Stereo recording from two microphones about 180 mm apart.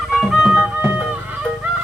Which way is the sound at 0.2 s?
5° right (ahead or behind).